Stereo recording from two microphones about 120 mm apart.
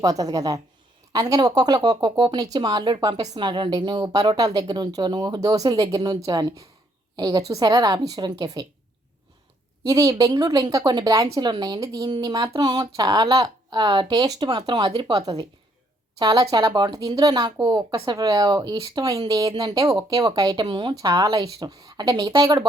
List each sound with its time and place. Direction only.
0.0 s a woman's voice: 30° right (ahead or behind)
9.8 s a woman's voice: 30° right (ahead or behind)